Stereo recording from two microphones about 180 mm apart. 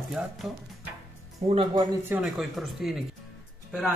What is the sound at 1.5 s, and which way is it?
Speech, 30° right (ahead or behind).